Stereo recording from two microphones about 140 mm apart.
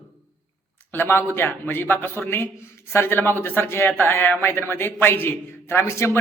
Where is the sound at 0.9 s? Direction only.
15° left (ahead or behind).